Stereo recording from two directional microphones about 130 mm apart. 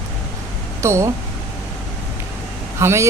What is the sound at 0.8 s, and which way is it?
Speech, 20° right (ahead or behind).